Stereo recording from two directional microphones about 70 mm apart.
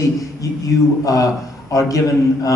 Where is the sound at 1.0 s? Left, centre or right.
Left.